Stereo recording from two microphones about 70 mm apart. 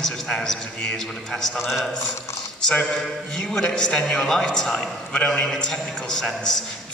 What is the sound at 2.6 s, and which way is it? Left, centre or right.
A man's voice, centre.